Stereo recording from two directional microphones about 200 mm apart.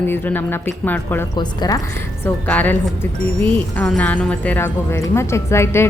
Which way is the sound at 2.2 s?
10° left (ahead or behind).